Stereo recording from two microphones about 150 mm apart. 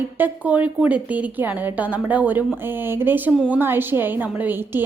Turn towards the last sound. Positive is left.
turn(degrees=-15)  # may be behind; listen again after turning